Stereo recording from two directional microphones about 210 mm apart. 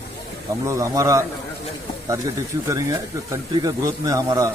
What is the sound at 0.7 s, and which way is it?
Speech, 15° right (ahead or behind).